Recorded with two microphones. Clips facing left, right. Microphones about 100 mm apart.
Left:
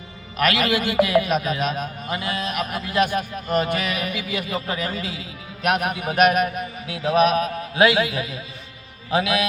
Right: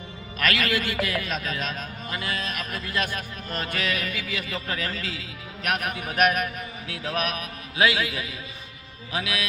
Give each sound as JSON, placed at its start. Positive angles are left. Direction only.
{"t": 0.3, "sound": "a man's voice", "side_deg": 20}
{"t": 5.6, "sound": "music", "side_deg": 20}